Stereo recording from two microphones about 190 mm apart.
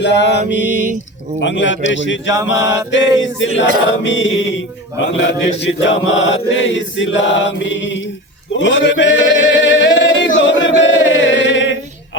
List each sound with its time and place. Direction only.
0.0 s mantra: 65° left (ahead or behind)
1.4 s chant: 70° left (ahead or behind)
4.0 s mantra: 75° left (ahead or behind)
5.1 s chant: 70° left (ahead or behind)
8.5 s male singing: 70° left (ahead or behind)